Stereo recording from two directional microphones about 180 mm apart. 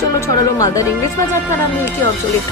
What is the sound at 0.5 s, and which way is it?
Speech, 20° left (ahead or behind).